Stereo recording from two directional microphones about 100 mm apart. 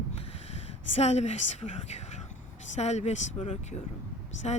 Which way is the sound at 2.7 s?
90° left.